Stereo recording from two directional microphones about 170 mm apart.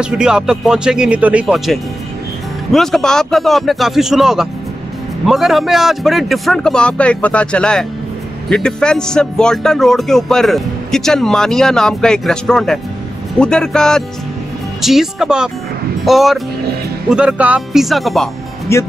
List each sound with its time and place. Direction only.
0.0 s speech: 5° right (ahead or behind)
18.7 s speech: 15° left (ahead or behind)